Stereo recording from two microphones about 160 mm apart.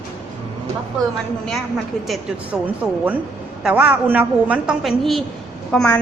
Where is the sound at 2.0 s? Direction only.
5° right (ahead or behind).